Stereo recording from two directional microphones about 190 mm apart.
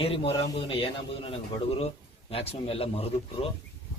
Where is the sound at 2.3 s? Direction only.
30° left (ahead or behind).